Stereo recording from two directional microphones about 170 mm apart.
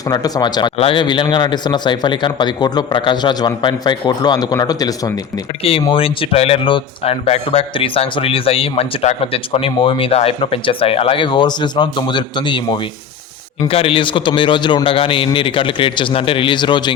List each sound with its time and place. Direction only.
0.1 s a man's voice: 25° left (ahead or behind)